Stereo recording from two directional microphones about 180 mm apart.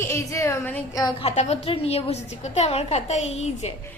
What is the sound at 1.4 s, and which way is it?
A woman's voice, 35° left (ahead or behind).